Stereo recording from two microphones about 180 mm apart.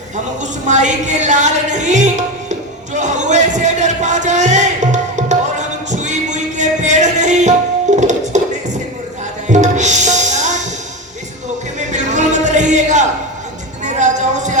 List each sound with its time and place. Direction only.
0.7 s music: 40° right (ahead or behind)
2.9 s a sound: 40° right (ahead or behind)
5.9 s music: 40° right (ahead or behind)
9.5 s music: 40° right (ahead or behind)
11.9 s music: 40° right (ahead or behind)